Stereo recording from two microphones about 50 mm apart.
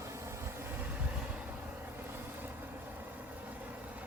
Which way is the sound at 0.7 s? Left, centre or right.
Right.